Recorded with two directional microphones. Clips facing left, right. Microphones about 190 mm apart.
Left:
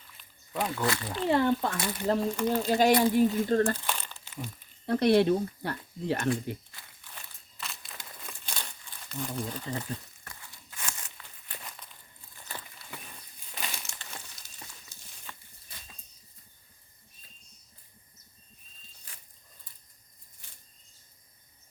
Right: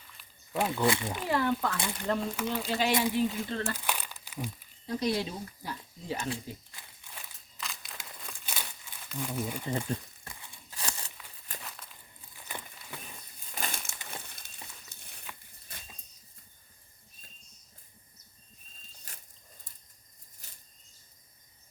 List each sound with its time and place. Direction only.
0.2 s a sound: 5° right (ahead or behind)
0.8 s speech: 25° right (ahead or behind)
1.3 s speech: 30° left (ahead or behind)
2.5 s speech: 40° left (ahead or behind)
3.8 s crumpling: 10° right (ahead or behind)
4.9 s speech: 65° left (ahead or behind)
7.6 s crumpling: centre (ahead or behind)
10.2 s crunch: 15° right (ahead or behind)
10.7 s a sound: 35° right (ahead or behind)
11.6 s walk: 5° right (ahead or behind)
13.6 s crumpling: 50° right (ahead or behind)
14.1 s a sound: 55° right (ahead or behind)